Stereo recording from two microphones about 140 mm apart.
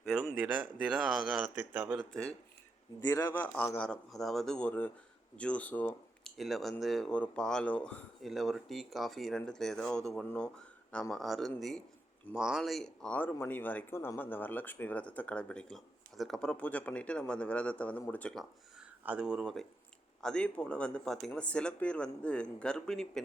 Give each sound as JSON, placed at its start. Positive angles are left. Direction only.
{"t": 0.2, "sound": "speech", "side_deg": 0}
{"t": 3.1, "sound": "speech", "side_deg": 20}
{"t": 6.3, "sound": "speech", "side_deg": 0}
{"t": 18.8, "sound": "speech", "side_deg": -5}
{"t": 20.2, "sound": "speech", "side_deg": 5}